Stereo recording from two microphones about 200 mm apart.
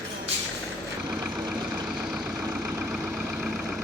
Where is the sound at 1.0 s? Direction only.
5° right (ahead or behind).